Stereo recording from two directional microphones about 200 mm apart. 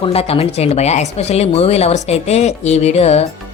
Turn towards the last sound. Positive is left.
turn(degrees=30)  # may be behind; listen again after turning